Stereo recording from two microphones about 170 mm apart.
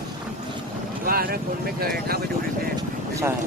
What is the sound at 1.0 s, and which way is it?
Speech, 60° right (ahead or behind).